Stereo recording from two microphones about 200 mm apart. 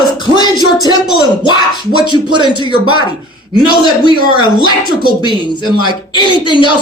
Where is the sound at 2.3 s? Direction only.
25° right (ahead or behind).